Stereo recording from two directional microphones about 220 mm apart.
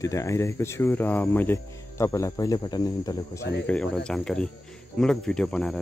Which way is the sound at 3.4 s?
50° left (ahead or behind).